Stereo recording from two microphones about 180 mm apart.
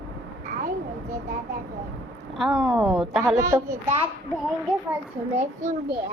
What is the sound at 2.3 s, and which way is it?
Speech, centre (ahead or behind).